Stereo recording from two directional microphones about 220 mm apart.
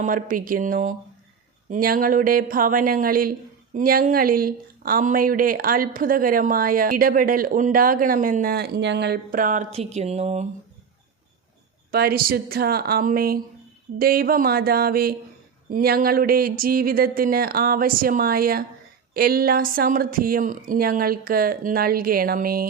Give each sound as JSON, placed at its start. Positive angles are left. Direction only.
{"t": 0.0, "sound": "speech", "side_deg": -40}
{"t": 9.7, "sound": "a sound", "side_deg": -30}
{"t": 11.9, "sound": "a woman's voice", "side_deg": -45}